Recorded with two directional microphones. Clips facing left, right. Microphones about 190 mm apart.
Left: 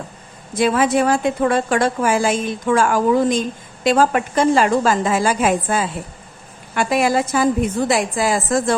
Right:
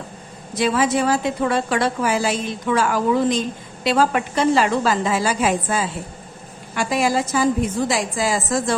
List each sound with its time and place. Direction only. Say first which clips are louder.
0.5 s a woman's voice: left 3 dB; 50° left (ahead or behind)